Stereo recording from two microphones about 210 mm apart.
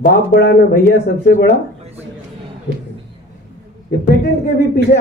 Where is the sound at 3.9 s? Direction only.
45° left (ahead or behind).